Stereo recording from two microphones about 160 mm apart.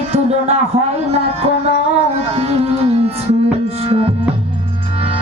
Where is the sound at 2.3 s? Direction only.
40° right (ahead or behind).